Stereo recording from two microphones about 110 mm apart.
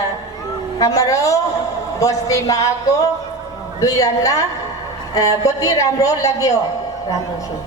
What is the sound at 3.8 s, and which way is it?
A man's voice, 35° left (ahead or behind).